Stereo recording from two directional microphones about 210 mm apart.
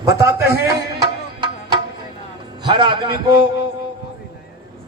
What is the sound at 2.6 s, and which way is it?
Speech, 20° right (ahead or behind).